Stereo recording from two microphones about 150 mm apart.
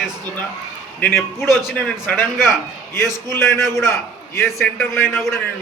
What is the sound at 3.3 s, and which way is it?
A man's voice, 20° left (ahead or behind).